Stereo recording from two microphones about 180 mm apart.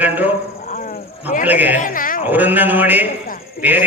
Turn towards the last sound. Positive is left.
turn(degrees=-10)  # may be behind; listen again after turning